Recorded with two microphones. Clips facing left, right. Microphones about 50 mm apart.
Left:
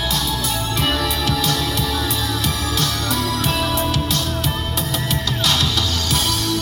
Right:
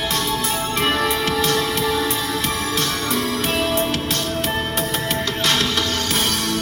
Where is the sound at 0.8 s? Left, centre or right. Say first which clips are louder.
Right 2 dB; right.